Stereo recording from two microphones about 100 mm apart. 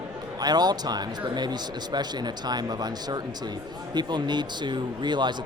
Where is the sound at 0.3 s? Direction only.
45° right (ahead or behind).